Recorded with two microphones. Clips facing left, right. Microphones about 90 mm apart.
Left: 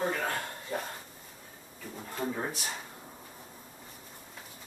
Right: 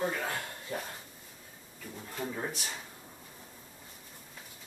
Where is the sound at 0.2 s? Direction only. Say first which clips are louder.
Left 3 dB; 35° left (ahead or behind).